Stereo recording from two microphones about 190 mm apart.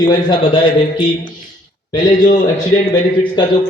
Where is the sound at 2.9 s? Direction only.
25° left (ahead or behind).